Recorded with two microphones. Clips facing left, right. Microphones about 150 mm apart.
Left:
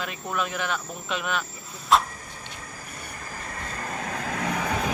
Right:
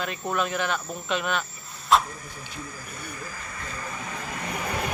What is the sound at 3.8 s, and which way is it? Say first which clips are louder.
Vehicle: left 4 dB; 55° left (ahead or behind).